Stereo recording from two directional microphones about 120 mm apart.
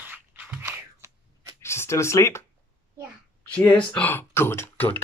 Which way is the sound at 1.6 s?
20° left (ahead or behind).